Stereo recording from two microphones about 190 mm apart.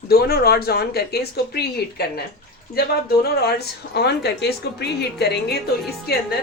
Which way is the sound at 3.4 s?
60° left (ahead or behind).